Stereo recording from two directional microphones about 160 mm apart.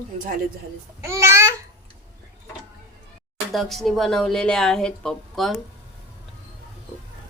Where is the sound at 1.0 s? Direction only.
15° right (ahead or behind).